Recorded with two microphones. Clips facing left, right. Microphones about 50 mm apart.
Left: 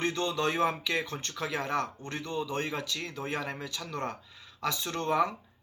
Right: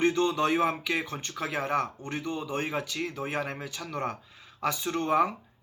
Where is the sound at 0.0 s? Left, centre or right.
Centre.